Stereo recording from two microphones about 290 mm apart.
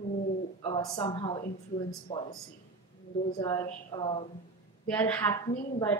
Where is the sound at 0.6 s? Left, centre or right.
Centre.